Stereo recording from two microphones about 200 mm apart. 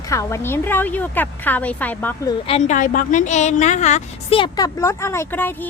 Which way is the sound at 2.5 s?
35° left (ahead or behind).